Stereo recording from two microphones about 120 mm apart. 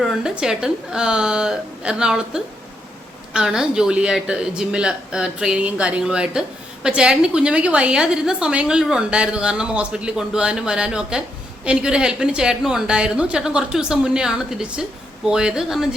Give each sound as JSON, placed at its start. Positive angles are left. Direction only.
{"t": 0.0, "sound": "a woman's voice", "side_deg": -5}